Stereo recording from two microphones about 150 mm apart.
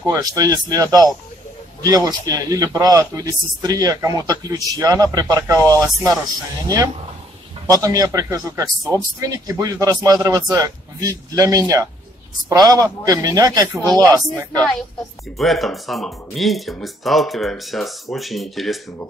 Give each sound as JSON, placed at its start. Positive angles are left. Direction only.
{"t": 0.0, "sound": "a man's voice", "side_deg": -25}
{"t": 7.6, "sound": "a man's voice", "side_deg": -25}
{"t": 15.3, "sound": "speech", "side_deg": 0}